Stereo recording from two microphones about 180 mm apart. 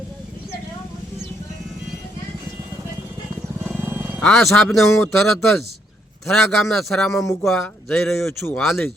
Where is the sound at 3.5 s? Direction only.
10° right (ahead or behind).